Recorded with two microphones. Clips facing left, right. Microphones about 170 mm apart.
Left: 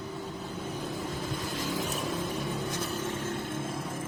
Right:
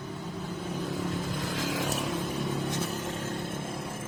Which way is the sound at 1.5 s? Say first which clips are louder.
Right 2 dB; 90° right.